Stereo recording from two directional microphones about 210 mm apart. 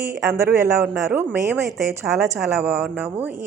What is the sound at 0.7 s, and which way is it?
A woman's voice, 5° right (ahead or behind).